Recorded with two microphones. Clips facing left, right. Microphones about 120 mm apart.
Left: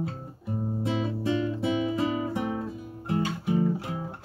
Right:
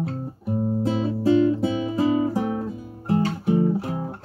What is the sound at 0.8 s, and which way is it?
Music, 35° right (ahead or behind).